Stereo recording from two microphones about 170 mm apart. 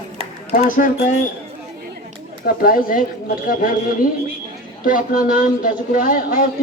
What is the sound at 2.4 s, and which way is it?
Speech, 60° left (ahead or behind).